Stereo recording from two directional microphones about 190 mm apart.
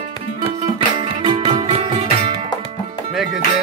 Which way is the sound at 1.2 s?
25° right (ahead or behind).